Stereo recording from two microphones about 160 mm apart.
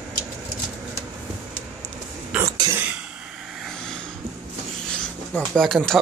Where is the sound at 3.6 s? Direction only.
5° left (ahead or behind).